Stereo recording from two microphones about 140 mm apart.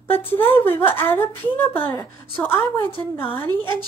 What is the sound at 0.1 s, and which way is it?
Speech, 15° left (ahead or behind).